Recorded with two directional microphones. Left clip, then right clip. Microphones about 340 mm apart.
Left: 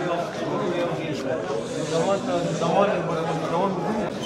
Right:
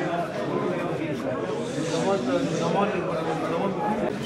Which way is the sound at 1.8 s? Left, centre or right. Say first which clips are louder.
Left 2 dB; centre.